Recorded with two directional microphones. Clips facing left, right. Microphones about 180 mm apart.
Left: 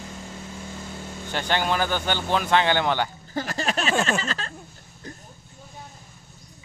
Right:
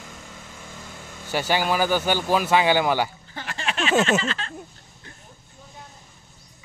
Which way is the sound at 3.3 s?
40° left (ahead or behind).